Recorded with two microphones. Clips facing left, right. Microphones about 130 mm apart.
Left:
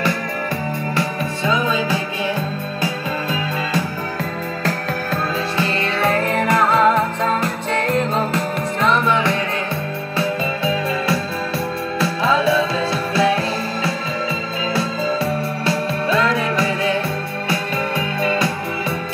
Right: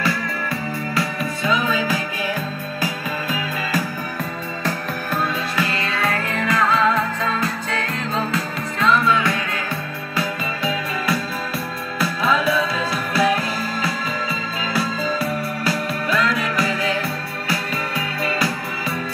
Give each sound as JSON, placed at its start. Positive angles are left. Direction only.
{"t": 0.9, "sound": "music", "side_deg": 25}
{"t": 5.1, "sound": "music", "side_deg": 30}